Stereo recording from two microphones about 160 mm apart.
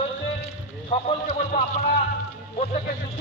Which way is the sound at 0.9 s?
40° left (ahead or behind).